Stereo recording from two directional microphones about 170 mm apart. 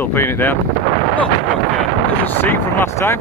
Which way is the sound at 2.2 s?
10° left (ahead or behind).